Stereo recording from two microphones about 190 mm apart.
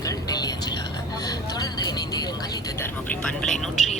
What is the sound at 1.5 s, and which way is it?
Speech, 20° left (ahead or behind).